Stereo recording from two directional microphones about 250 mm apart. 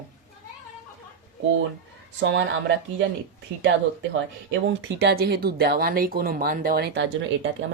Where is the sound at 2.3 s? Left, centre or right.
Right.